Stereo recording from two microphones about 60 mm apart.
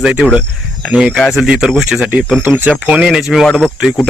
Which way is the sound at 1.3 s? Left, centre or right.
Centre.